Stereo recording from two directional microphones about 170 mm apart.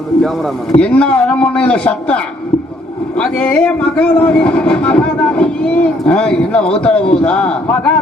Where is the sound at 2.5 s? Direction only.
35° left (ahead or behind).